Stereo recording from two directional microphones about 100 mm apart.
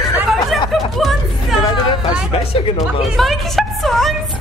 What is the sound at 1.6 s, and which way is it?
Speech, 55° left (ahead or behind).